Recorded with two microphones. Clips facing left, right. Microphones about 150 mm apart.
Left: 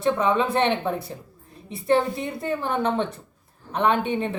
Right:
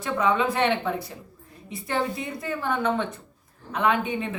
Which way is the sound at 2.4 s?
25° left (ahead or behind).